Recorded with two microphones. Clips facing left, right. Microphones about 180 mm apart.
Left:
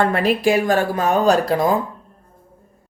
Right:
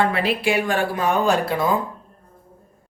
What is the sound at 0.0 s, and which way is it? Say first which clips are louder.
Speech: left 4 dB; 45° left (ahead or behind).